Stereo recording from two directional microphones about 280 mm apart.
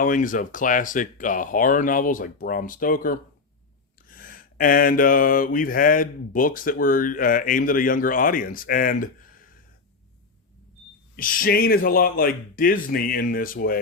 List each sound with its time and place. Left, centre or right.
0.0 s mantra: left
11.2 s speech: left